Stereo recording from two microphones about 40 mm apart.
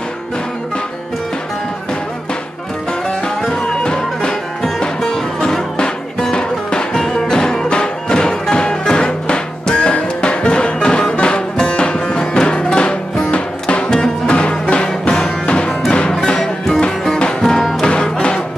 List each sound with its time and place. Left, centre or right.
3.4 s music: centre; by 13.8 s left
13.8 s music: centre
16.3 s music: centre